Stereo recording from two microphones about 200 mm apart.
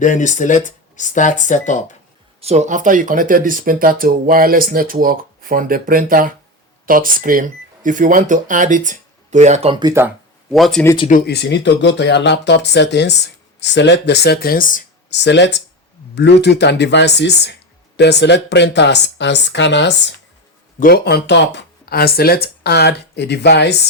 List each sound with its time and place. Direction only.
0.0 s speech: 40° left (ahead or behind)
2.4 s speech: 35° right (ahead or behind)
10.5 s speech: centre (ahead or behind)
11.1 s speech: 50° left (ahead or behind)
15.1 s speech: 60° left (ahead or behind)
20.7 s speech: 45° left (ahead or behind)